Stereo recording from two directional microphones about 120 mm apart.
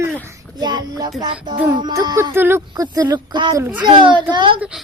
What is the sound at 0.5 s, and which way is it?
Child singing, 35° right (ahead or behind).